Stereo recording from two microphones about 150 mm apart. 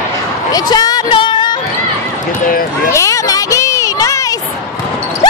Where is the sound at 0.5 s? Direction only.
25° left (ahead or behind).